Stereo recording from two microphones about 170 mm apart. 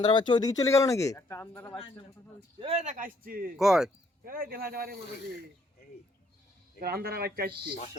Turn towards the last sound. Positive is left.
turn(degrees=-65)  # may be behind; listen again after turning